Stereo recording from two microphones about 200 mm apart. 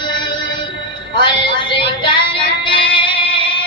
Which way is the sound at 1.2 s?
25° left (ahead or behind).